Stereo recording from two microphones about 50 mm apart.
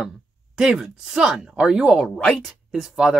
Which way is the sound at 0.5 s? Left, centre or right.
Centre.